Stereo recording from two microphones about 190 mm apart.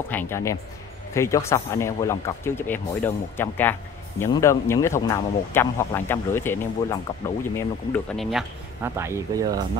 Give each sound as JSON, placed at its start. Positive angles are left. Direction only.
{"t": 0.1, "sound": "speech", "side_deg": 10}
{"t": 8.8, "sound": "speech", "side_deg": -15}